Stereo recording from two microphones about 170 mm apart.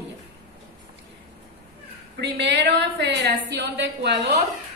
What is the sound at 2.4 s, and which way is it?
A woman's voice, 90° right.